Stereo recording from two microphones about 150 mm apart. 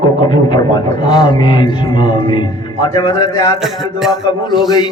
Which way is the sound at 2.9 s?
25° left (ahead or behind).